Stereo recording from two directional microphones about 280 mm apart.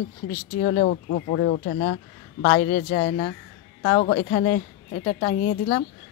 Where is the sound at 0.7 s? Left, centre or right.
Left.